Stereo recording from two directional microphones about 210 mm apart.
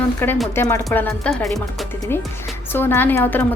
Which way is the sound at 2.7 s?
10° left (ahead or behind).